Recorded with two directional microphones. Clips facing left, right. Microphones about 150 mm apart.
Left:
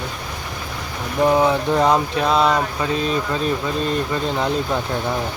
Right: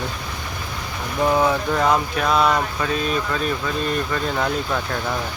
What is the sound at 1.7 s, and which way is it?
Speech, 30° left (ahead or behind).